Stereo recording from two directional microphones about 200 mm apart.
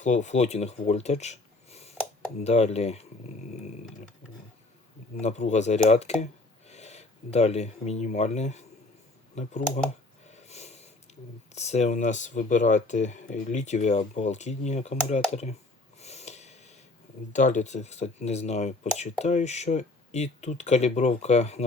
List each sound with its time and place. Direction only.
0.0 s speech: 35° left (ahead or behind)
5.2 s speech: 35° left (ahead or behind)
10.2 s snort: 35° left (ahead or behind)
11.5 s speech: 35° left (ahead or behind)
16.0 s snort: 35° left (ahead or behind)
17.3 s speech: 35° left (ahead or behind)